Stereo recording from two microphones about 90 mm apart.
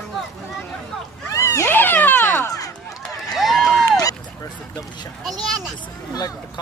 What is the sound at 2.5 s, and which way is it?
Run, 40° left (ahead or behind).